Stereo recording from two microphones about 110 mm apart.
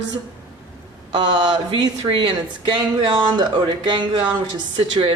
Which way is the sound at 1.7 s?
50° right (ahead or behind).